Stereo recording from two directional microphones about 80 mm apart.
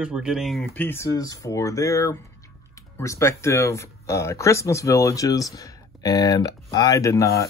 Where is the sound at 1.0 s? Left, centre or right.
Left.